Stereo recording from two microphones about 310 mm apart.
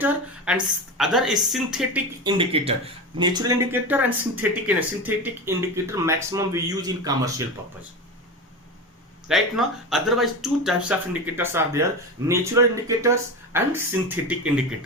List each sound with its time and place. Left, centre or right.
0.0 s a woman's voice: centre
2.2 s speech: centre
9.3 s a woman's voice: centre